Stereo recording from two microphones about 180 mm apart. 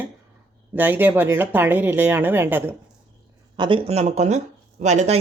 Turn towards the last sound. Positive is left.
turn(degrees=-40)  # may be behind; listen again after turning